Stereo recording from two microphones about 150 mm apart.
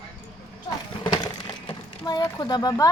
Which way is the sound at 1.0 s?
30° left (ahead or behind).